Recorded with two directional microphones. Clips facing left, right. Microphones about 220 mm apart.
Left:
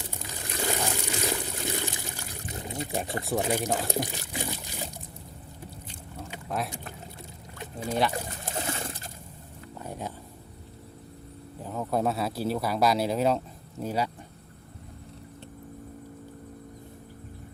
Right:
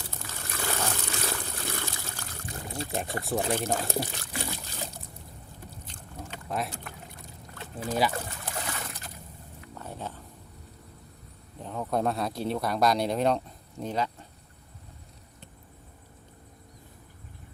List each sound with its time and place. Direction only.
0.0 s pour: 15° left (ahead or behind)
3.3 s speech: 15° left (ahead or behind)
5.9 s a sound: 10° left (ahead or behind)
8.4 s boat: 25° left (ahead or behind)
9.7 s a sound: 10° left (ahead or behind)
11.6 s speech: 5° left (ahead or behind)